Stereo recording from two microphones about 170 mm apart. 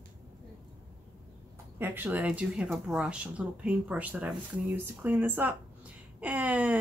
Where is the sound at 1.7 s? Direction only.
10° right (ahead or behind).